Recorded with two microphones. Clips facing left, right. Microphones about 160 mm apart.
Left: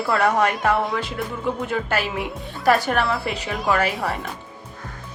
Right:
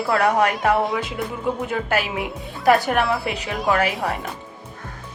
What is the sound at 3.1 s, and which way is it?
Speech, centre (ahead or behind).